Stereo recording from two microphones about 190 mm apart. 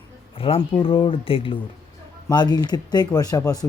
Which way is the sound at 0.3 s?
30° left (ahead or behind).